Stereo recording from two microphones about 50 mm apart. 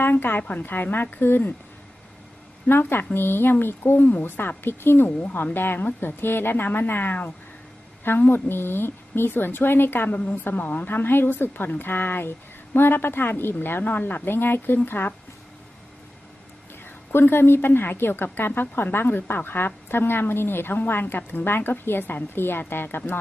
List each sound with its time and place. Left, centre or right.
0.0 s a woman's voice: left
2.6 s a woman's voice: left
10.2 s a woman's voice: left
16.8 s a woman's voice: left